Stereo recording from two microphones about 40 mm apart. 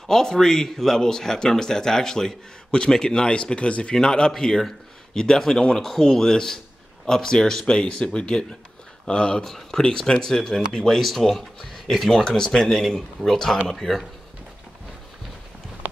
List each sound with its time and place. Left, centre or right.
0.1 s speech: centre; by 3.9 s left
3.9 s speech: centre
5.8 s speech: centre; by 9.4 s left
9.4 s speech: centre
10.9 s speech: centre